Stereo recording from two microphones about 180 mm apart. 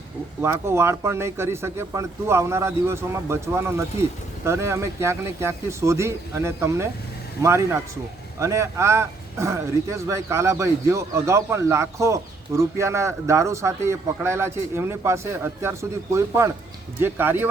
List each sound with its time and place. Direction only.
0.4 s speech: 15° right (ahead or behind)